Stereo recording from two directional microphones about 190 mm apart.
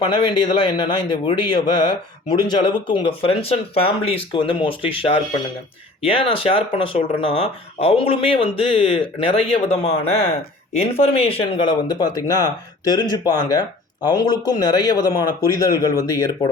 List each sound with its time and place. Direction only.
0.0 s speech: 25° left (ahead or behind)